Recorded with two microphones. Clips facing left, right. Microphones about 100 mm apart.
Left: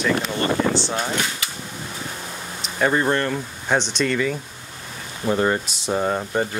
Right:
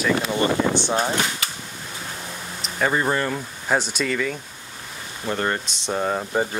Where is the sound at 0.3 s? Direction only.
15° right (ahead or behind).